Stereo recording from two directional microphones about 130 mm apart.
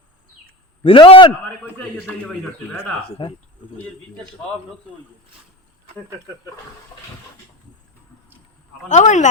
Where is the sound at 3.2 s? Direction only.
40° left (ahead or behind).